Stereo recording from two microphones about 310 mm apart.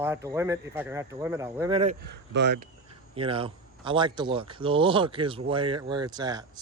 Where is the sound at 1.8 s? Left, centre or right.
Right.